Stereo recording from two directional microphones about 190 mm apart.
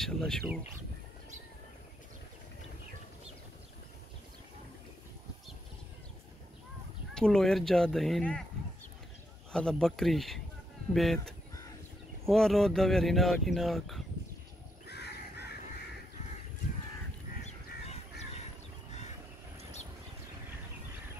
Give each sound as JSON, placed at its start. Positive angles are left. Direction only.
{"t": 0.0, "sound": "speech", "side_deg": 0}
{"t": 7.2, "sound": "speech", "side_deg": 5}
{"t": 9.5, "sound": "speech", "side_deg": 5}
{"t": 14.9, "sound": "crow", "side_deg": 60}